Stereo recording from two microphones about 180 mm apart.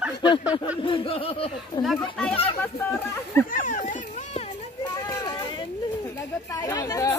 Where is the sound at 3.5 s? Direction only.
45° left (ahead or behind).